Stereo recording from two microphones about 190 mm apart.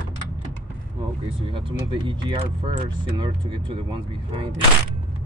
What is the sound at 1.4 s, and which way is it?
Speech, 25° right (ahead or behind).